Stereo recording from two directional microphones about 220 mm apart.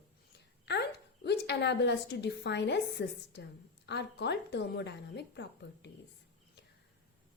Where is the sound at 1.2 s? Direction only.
50° left (ahead or behind).